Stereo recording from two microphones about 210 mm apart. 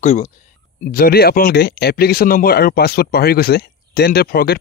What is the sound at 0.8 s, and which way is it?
Speech, 45° left (ahead or behind).